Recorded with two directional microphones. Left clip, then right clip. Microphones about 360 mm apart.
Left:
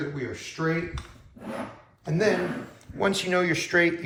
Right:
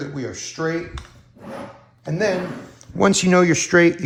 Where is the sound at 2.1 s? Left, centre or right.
Right.